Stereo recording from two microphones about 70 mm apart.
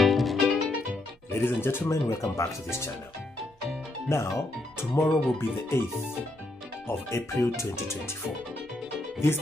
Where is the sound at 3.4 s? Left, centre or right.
Centre.